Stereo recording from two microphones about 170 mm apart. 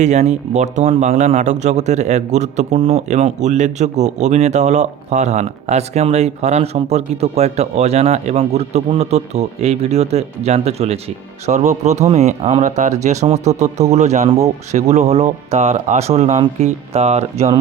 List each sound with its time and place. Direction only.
0.0 s speech: 45° right (ahead or behind)